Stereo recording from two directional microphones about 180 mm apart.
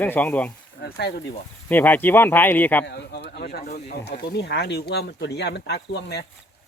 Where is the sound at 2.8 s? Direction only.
70° left (ahead or behind).